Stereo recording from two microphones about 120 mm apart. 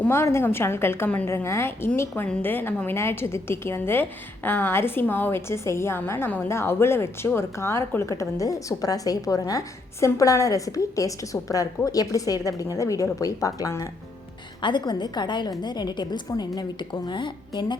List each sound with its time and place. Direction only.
0.0 s a woman's voice: 20° left (ahead or behind)
14.6 s a woman's voice: 40° left (ahead or behind)